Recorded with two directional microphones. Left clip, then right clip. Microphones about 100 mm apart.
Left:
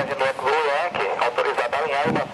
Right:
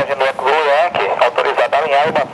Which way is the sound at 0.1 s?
40° right (ahead or behind).